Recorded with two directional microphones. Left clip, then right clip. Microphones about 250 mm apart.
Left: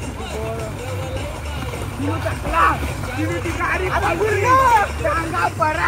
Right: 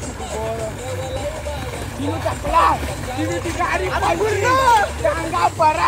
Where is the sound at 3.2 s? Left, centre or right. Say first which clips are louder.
Right 1 dB; right.